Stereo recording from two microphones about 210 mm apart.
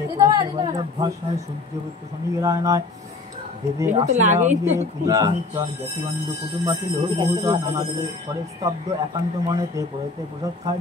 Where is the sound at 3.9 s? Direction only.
35° right (ahead or behind).